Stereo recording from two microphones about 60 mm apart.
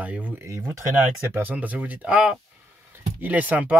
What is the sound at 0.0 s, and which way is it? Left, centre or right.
Speech, right.